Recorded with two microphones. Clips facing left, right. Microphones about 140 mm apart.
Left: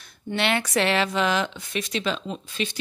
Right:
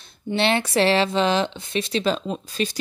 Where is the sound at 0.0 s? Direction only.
25° right (ahead or behind).